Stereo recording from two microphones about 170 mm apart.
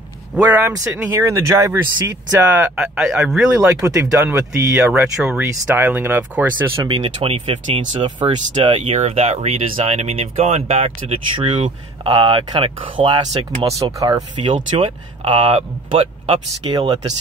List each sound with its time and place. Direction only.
0.3 s speech: 10° right (ahead or behind)
3.5 s speech: 20° right (ahead or behind)
7.0 s speech: 40° right (ahead or behind)